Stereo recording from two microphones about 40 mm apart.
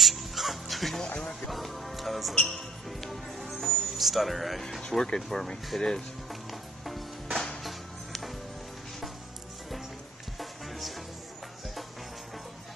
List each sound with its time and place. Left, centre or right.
0.0 s music: centre
1.0 s a sound: left
1.5 s music: centre
2.3 s music: centre
4.9 s speech: centre
6.8 s music: centre